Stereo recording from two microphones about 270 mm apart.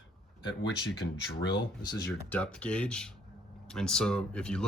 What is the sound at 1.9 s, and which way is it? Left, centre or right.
Speech, centre.